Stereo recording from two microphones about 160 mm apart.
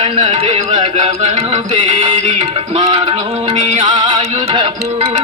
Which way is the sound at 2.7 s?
35° right (ahead or behind).